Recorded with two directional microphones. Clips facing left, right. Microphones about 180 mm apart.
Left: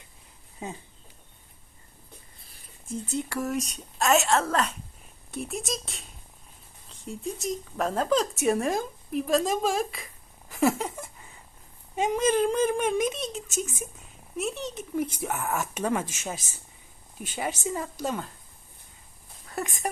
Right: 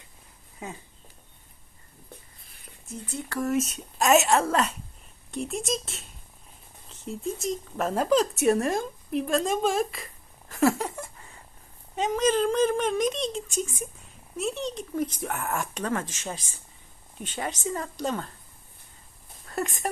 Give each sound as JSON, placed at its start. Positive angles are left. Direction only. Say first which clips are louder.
{"t": 3.2, "sound": "speech", "louder": "left 1 dB", "side_deg": 10}
{"t": 3.4, "sound": "speech", "louder": "right 4 dB", "side_deg": 0}
{"t": 3.9, "sound": "a woman's voice", "louder": "right 2 dB", "side_deg": -20}
{"t": 10.5, "sound": "speech", "louder": "right 1 dB", "side_deg": 15}
{"t": 10.8, "sound": "speech", "louder": "right 1 dB", "side_deg": 0}
{"t": 19.5, "sound": "speech", "louder": "right 2 dB", "side_deg": 0}